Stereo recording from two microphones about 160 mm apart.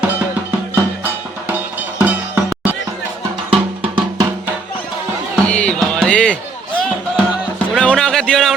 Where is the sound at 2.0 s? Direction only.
10° right (ahead or behind).